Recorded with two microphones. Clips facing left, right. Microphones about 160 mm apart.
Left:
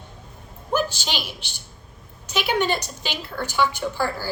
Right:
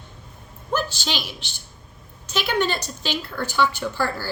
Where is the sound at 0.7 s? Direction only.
10° left (ahead or behind).